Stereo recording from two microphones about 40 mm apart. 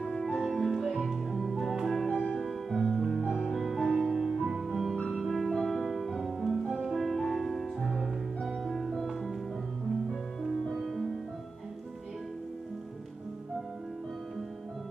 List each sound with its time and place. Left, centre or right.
0.0 s music: centre
4.6 s music: centre
10.4 s music: centre